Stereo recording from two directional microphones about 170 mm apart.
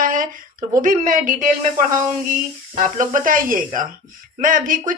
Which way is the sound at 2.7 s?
50° right (ahead or behind).